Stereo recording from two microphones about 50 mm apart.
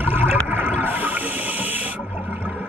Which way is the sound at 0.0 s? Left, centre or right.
Right.